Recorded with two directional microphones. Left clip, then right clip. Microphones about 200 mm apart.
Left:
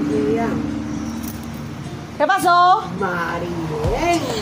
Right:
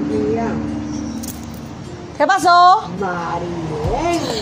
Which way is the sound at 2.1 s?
25° right (ahead or behind).